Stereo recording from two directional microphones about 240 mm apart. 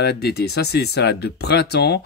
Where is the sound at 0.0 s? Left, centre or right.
Left.